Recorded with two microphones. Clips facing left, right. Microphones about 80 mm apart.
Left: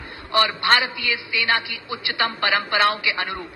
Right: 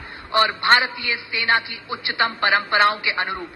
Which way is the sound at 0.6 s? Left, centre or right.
Right.